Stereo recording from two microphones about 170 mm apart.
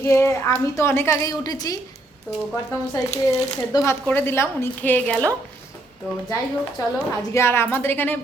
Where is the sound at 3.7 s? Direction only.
15° left (ahead or behind).